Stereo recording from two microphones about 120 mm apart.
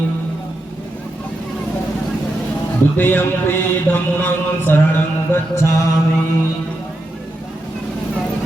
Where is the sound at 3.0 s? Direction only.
15° left (ahead or behind).